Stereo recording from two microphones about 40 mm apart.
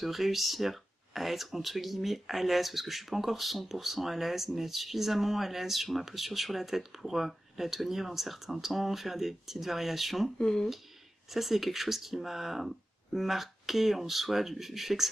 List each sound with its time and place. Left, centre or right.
0.0 s speech: centre
10.4 s speech: centre
11.2 s speech: centre